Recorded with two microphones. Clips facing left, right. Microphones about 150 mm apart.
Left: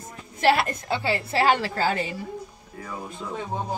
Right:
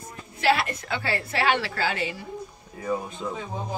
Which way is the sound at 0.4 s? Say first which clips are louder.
Left 2 dB; 45° left (ahead or behind).